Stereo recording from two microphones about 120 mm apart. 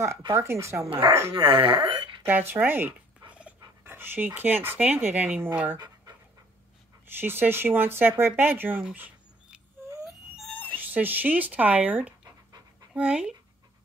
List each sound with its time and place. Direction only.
0.3 s speech: 25° right (ahead or behind)
0.8 s speech: 50° right (ahead or behind)
2.2 s speech: 15° right (ahead or behind)
7.2 s speech: 15° right (ahead or behind)
10.5 s a sound: 10° left (ahead or behind)
10.8 s speech: 15° right (ahead or behind)